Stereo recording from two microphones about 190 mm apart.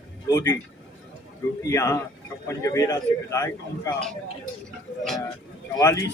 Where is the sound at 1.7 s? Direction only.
15° left (ahead or behind).